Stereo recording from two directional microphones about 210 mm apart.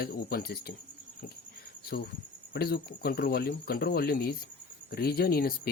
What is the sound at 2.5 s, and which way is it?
Speech, 50° left (ahead or behind).